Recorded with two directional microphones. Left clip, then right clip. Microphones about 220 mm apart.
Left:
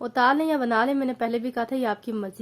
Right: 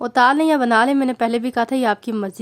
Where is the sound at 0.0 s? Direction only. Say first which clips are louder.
Right 6 dB; 30° right (ahead or behind).